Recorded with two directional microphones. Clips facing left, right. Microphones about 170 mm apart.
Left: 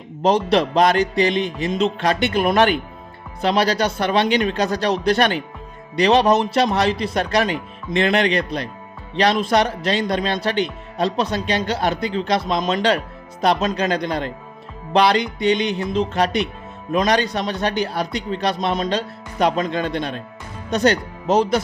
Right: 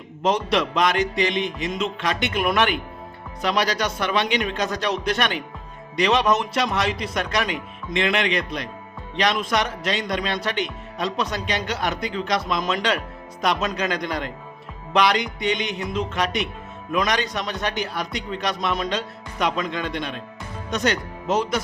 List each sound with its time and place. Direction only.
0.2 s a man's voice: 35° left (ahead or behind)